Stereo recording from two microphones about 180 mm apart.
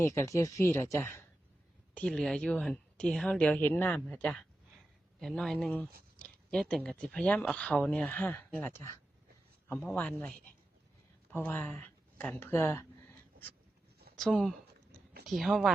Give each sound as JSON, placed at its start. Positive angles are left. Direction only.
{"t": 0.0, "sound": "a man's voice", "side_deg": 15}
{"t": 14.2, "sound": "a woman's voice", "side_deg": 5}